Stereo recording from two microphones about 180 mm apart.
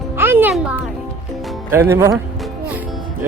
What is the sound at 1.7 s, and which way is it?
Speech, 15° right (ahead or behind).